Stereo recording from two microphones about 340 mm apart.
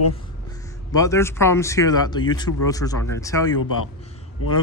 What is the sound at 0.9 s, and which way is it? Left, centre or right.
Speech, centre.